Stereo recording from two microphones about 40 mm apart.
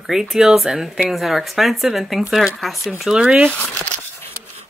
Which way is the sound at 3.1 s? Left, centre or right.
Centre.